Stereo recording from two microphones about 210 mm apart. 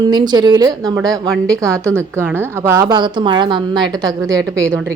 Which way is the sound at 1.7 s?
10° right (ahead or behind).